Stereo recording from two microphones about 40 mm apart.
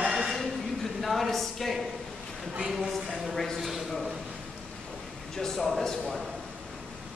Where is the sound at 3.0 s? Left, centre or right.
Centre.